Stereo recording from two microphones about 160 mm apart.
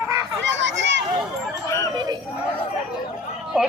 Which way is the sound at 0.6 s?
90° right.